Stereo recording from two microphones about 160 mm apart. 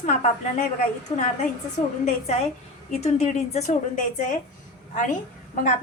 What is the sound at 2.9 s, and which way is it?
A woman's voice, 40° left (ahead or behind).